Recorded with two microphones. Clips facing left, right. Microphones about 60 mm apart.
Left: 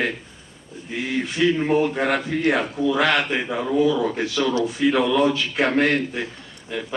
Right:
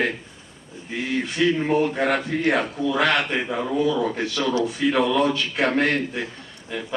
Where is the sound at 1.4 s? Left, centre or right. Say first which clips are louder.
Left 1 dB; centre.